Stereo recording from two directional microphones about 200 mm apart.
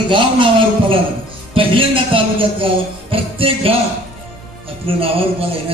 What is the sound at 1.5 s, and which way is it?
A man's voice, 25° right (ahead or behind).